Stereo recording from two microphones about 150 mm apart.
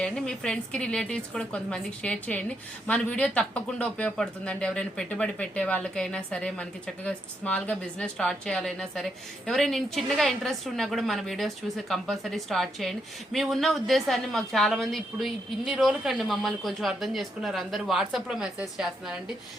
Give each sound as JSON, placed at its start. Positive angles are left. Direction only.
{"t": 0.0, "sound": "a woman's voice", "side_deg": 5}